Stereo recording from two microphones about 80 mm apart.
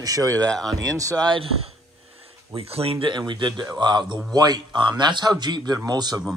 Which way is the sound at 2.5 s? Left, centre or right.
Right.